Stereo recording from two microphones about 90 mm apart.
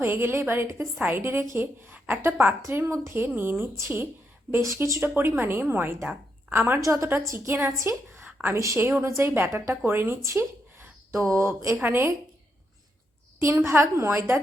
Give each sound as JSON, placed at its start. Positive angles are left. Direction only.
{"t": 0.0, "sound": "a woman's voice", "side_deg": -25}
{"t": 8.3, "sound": "a sound", "side_deg": -15}
{"t": 8.5, "sound": "a woman's voice", "side_deg": -35}
{"t": 13.4, "sound": "a woman's voice", "side_deg": -25}